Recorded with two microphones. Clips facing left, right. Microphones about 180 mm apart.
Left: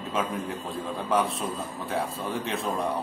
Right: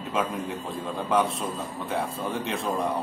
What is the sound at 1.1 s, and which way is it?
Speech, centre (ahead or behind).